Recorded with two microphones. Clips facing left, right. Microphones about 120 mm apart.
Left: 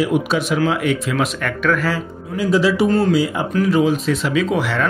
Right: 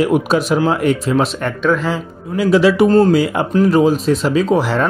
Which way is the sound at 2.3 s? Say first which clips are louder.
Right 4 dB; 70° right (ahead or behind).